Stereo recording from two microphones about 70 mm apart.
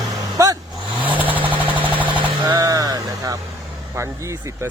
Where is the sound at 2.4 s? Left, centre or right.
Right.